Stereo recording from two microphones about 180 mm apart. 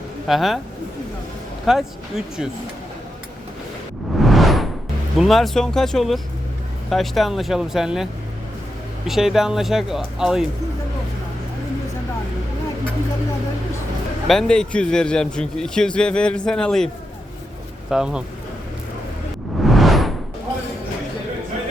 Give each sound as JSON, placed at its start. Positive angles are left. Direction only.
{"t": 0.3, "sound": "speech", "side_deg": 0}
{"t": 1.6, "sound": "speech", "side_deg": -5}
{"t": 4.2, "sound": "whoosh", "side_deg": 0}
{"t": 5.1, "sound": "speech", "side_deg": 0}
{"t": 9.0, "sound": "speech", "side_deg": 0}
{"t": 14.3, "sound": "speech", "side_deg": 5}
{"t": 17.9, "sound": "speech", "side_deg": -5}
{"t": 19.6, "sound": "whoosh", "side_deg": 0}